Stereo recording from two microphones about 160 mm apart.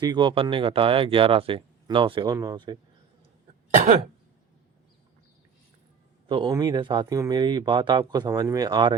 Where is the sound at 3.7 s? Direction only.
50° right (ahead or behind).